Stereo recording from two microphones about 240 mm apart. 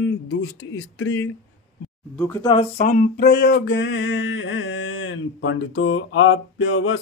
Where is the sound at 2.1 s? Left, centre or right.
Centre.